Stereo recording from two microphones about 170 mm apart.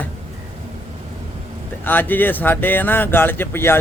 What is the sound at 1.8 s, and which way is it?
A man's voice, 10° left (ahead or behind).